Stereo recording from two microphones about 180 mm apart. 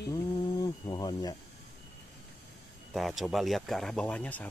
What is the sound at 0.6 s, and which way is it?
Speech, 25° left (ahead or behind).